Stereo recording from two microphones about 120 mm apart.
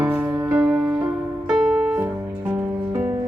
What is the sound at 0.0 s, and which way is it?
Music, 10° right (ahead or behind).